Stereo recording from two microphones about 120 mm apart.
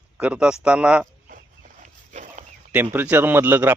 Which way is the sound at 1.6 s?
90° right.